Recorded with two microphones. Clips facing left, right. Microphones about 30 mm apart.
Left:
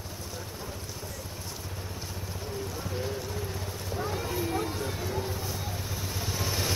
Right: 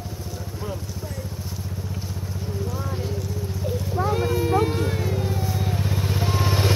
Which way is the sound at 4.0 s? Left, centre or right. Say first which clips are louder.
Right 10 dB; right.